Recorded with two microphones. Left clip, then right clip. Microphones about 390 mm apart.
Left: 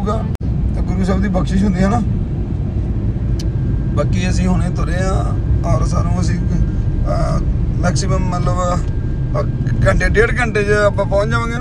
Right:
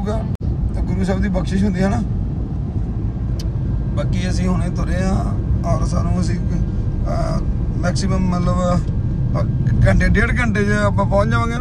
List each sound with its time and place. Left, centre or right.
1.0 s speech: centre
3.9 s speech: centre